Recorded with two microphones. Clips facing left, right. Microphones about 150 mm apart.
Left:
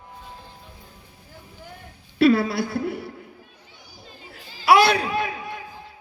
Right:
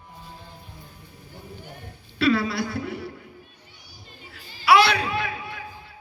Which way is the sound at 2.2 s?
50° left (ahead or behind).